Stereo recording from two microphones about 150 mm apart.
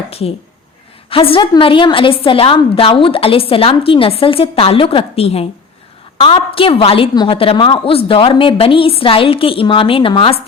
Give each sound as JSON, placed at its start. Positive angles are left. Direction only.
{"t": 0.1, "sound": "a woman's voice", "side_deg": 40}